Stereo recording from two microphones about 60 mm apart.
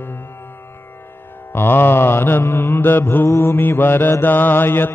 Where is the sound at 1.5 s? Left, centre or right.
Left.